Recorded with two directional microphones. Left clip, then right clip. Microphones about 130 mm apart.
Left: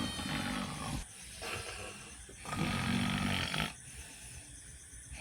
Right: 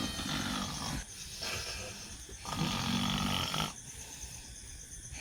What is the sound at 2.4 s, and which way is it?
Snoring, 30° left (ahead or behind).